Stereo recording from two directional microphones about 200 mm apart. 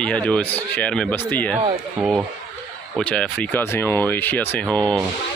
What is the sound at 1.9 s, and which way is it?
Speech, 5° right (ahead or behind).